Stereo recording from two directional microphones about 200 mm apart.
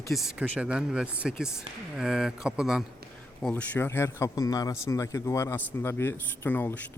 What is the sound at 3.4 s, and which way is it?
Speech, 5° left (ahead or behind).